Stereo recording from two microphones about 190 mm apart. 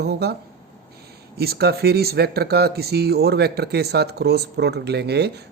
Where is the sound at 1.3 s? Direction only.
55° right (ahead or behind).